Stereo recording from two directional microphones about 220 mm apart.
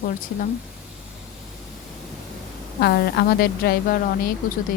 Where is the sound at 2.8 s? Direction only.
45° left (ahead or behind).